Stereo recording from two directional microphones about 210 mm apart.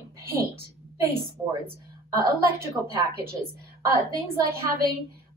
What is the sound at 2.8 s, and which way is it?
Speech, 5° right (ahead or behind).